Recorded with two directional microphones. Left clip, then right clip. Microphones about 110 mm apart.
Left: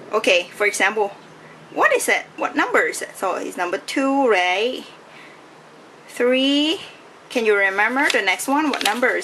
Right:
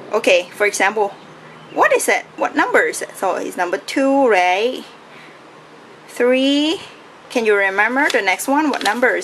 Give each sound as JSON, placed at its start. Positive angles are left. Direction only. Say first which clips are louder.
{"t": 0.1, "sound": "speech", "louder": "right 3 dB", "side_deg": -5}
{"t": 6.1, "sound": "speech", "louder": "right 3 dB", "side_deg": 0}
{"t": 8.7, "sound": "speech", "louder": "right 2 dB", "side_deg": 10}